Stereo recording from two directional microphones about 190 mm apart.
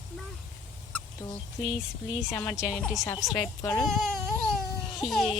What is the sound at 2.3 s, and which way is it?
Speech, 15° left (ahead or behind).